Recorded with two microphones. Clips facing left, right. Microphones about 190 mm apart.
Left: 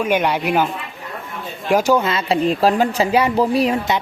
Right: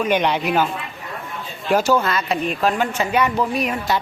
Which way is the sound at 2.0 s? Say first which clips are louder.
Left 4 dB; 30° left (ahead or behind).